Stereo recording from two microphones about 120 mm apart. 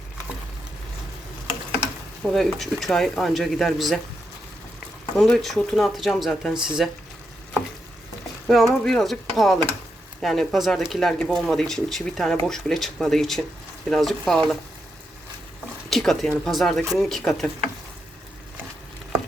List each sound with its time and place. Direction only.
2.2 s speech: centre (ahead or behind)
5.2 s speech: centre (ahead or behind)
8.4 s speech: centre (ahead or behind)
15.9 s speech: centre (ahead or behind)